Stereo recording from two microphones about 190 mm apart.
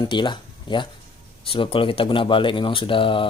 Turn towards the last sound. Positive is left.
turn(degrees=25)  # may be behind; listen again after turning